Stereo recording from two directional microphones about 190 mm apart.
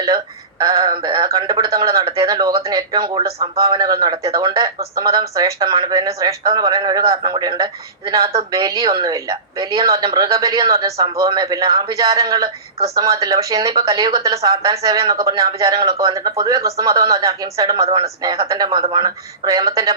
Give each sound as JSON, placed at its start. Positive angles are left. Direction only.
{"t": 0.6, "sound": "speech", "side_deg": -20}